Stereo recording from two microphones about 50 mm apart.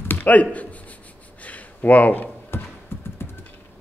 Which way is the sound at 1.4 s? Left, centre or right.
Left.